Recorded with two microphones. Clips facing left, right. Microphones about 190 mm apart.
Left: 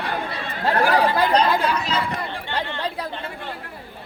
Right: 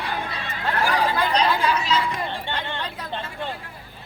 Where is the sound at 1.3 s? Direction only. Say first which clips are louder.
Left 2 dB; 50° left (ahead or behind).